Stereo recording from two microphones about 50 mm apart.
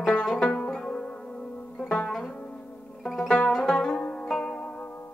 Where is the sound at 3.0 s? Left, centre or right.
Centre.